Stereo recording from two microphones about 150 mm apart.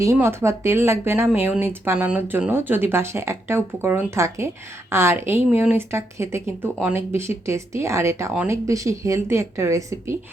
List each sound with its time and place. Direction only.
0.0 s speech: 20° right (ahead or behind)